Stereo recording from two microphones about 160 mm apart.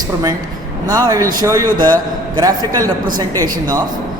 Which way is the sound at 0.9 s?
25° right (ahead or behind).